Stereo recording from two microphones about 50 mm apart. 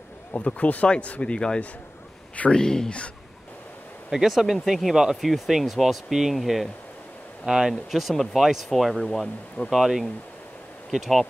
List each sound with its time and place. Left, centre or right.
0.3 s speech: left
4.1 s speech: centre
7.4 s speech: centre
7.9 s speech: centre
9.7 s speech: centre